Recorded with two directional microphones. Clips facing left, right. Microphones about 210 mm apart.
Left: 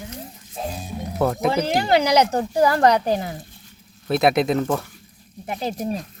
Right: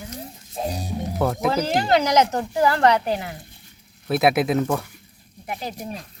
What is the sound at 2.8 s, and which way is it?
Speech, 40° left (ahead or behind).